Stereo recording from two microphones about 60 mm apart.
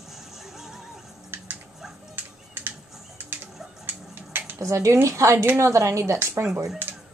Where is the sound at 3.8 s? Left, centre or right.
Right.